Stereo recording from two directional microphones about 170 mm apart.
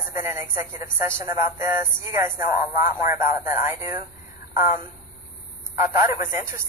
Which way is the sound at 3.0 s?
55° left (ahead or behind).